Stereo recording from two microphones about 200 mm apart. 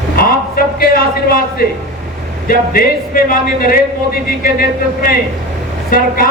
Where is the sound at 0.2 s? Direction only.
45° left (ahead or behind).